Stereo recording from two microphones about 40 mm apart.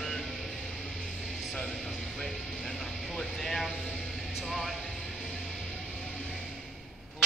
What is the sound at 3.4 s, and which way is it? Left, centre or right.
Speech, centre.